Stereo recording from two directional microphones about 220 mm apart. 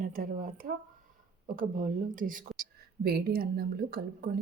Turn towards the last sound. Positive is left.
turn(degrees=-45)  # may be behind; listen again after turning